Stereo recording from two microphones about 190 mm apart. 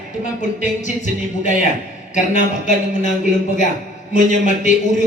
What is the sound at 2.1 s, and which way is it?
Speech, 40° left (ahead or behind).